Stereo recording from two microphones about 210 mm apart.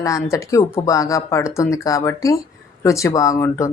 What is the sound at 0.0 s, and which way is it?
Speech, 15° left (ahead or behind).